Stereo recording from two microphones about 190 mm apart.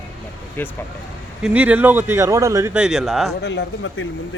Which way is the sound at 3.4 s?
65° left (ahead or behind).